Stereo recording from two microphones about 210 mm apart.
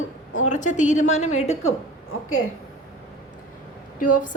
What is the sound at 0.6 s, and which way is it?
Speech, 35° left (ahead or behind).